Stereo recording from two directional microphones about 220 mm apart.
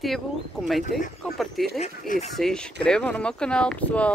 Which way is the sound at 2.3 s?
Centre (ahead or behind).